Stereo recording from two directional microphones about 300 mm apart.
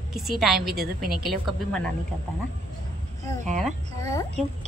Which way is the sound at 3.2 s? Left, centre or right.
Right.